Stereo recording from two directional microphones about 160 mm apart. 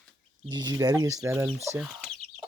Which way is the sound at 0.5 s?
25° right (ahead or behind).